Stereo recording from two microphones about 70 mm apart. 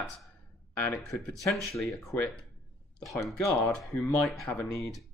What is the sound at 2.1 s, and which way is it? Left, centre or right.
Speech, left.